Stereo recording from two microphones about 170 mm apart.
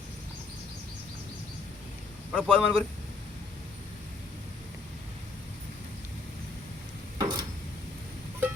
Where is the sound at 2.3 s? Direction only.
5° left (ahead or behind).